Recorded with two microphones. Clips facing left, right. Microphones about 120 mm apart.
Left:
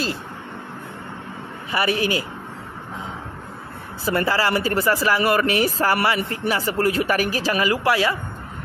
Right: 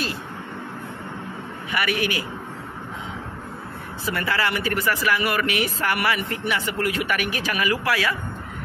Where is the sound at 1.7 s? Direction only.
30° left (ahead or behind).